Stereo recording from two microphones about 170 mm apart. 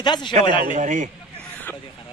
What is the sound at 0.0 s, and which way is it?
Speech, 25° left (ahead or behind).